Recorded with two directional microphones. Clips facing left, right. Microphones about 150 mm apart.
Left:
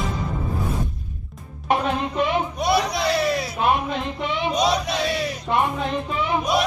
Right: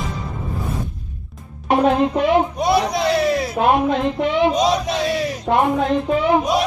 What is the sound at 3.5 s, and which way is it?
Music, 90° right.